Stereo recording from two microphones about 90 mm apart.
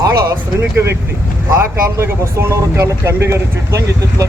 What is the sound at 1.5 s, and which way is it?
Speech, 25° right (ahead or behind).